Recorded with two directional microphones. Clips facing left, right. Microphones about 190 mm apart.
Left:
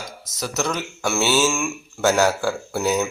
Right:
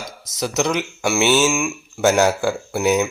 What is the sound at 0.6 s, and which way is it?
Speech, 15° right (ahead or behind).